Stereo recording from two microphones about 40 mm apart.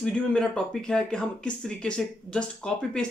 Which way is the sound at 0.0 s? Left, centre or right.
Left.